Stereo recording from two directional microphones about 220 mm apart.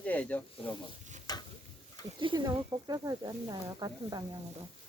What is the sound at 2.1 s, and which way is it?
Speech, 20° right (ahead or behind).